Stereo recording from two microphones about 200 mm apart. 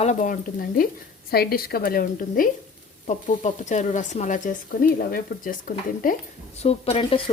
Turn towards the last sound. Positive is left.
turn(degrees=30)  # may be behind; listen again after turning